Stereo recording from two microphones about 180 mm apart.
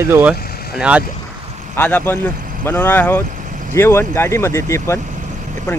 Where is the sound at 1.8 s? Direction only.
10° left (ahead or behind).